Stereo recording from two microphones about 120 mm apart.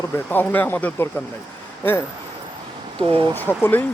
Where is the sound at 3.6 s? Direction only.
15° left (ahead or behind).